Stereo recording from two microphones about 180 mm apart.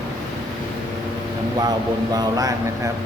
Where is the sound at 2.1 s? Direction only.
20° right (ahead or behind).